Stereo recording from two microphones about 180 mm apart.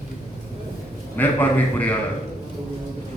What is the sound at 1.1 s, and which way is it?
Speech, 10° left (ahead or behind).